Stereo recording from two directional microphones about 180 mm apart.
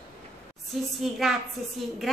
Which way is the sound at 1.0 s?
Centre (ahead or behind).